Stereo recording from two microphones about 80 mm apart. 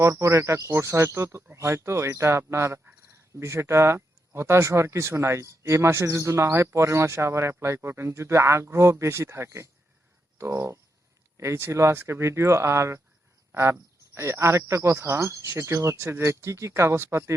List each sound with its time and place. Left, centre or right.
0.0 s speech: right